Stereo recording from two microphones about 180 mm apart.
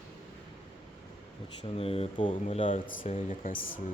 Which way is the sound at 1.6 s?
35° left (ahead or behind).